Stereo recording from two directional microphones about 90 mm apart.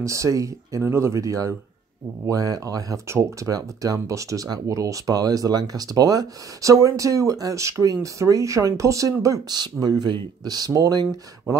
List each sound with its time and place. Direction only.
0.0 s speech: 35° right (ahead or behind)
9.6 s speech: 50° right (ahead or behind)